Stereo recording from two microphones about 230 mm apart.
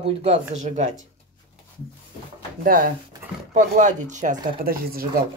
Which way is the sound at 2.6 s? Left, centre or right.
Right.